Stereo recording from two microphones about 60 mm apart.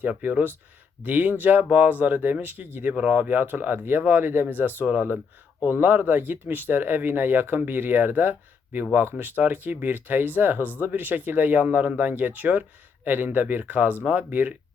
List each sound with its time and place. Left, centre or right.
0.2 s speech: right